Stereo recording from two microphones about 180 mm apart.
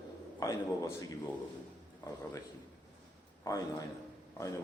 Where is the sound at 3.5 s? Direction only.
15° left (ahead or behind).